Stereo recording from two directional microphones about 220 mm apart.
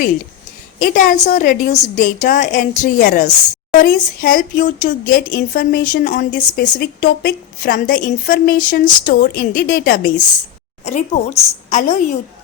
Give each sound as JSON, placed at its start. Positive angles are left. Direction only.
{"t": 0.8, "sound": "a woman's voice", "side_deg": 40}
{"t": 10.8, "sound": "a woman's voice", "side_deg": 30}